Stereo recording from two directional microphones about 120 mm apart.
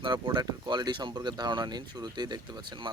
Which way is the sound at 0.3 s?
40° right (ahead or behind).